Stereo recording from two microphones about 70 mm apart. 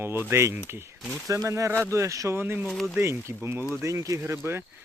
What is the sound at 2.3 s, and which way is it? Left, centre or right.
Speech, right.